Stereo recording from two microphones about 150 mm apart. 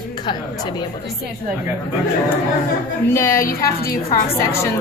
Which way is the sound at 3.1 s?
15° left (ahead or behind).